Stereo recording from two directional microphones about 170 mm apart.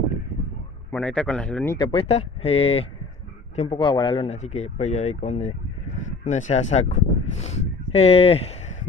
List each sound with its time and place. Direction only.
0.9 s speech: 5° left (ahead or behind)
1.8 s speech: 30° left (ahead or behind)